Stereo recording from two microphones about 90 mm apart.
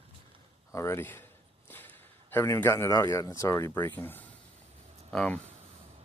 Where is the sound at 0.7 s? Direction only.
30° left (ahead or behind).